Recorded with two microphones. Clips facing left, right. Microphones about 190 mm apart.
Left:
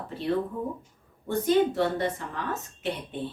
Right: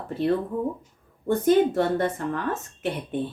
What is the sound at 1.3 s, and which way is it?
Speech, 50° right (ahead or behind).